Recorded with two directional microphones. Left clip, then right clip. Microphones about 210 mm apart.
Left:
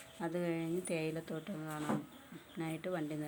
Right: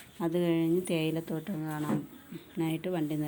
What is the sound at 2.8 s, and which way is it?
Speech, 5° right (ahead or behind).